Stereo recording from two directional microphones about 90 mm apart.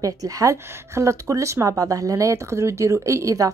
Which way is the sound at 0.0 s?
40° right (ahead or behind).